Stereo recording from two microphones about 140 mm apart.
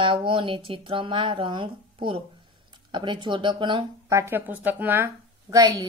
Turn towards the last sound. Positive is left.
turn(degrees=-25)  # may be behind; listen again after turning